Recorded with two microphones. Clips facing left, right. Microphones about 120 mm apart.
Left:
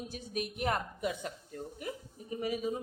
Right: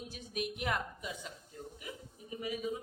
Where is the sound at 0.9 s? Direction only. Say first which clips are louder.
Left 8 dB; 60° left (ahead or behind); by 2.7 s 40° left (ahead or behind).